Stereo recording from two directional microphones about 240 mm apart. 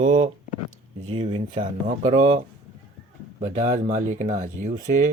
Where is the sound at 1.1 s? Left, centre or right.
Right.